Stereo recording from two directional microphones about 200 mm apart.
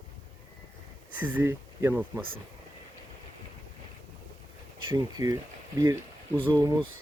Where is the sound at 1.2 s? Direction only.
10° right (ahead or behind).